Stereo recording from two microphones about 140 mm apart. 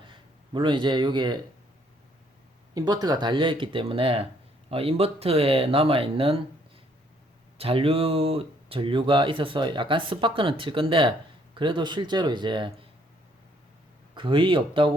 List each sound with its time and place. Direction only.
0.0 s speech: 35° right (ahead or behind)
2.7 s speech: 30° right (ahead or behind)
7.6 s speech: 40° right (ahead or behind)
14.2 s speech: 35° right (ahead or behind)